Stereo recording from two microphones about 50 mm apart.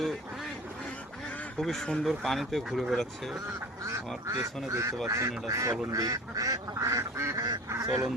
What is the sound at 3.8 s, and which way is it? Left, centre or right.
Duck, right.